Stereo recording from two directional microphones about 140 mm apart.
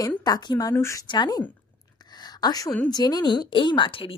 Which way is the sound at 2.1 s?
30° left (ahead or behind).